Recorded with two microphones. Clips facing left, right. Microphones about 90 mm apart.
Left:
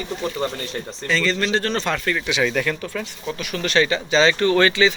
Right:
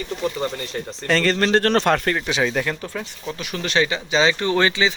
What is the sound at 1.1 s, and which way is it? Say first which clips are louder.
Speech: right 3 dB; 55° right (ahead or behind).